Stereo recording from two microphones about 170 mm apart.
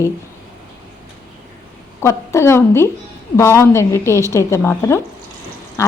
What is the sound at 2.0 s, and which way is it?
A woman's voice, 15° left (ahead or behind).